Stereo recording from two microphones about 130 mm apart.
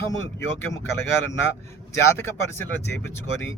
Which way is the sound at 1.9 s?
20° left (ahead or behind).